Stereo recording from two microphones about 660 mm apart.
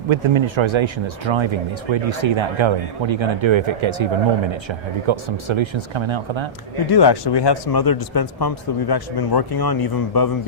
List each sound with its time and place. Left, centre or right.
0.1 s speech: right
6.9 s speech: left